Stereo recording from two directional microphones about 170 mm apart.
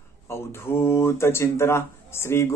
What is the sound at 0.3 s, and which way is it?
Speech, 15° left (ahead or behind).